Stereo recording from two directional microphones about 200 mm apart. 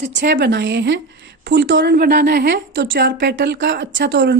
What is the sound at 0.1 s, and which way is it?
Speech, 60° right (ahead or behind).